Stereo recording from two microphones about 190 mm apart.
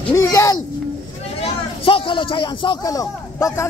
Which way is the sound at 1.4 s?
25° left (ahead or behind).